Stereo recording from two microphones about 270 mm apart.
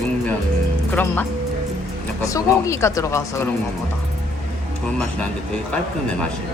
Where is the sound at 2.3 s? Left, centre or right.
Centre.